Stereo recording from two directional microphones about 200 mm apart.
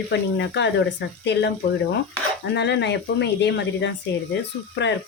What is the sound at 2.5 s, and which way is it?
Speech, 60° left (ahead or behind).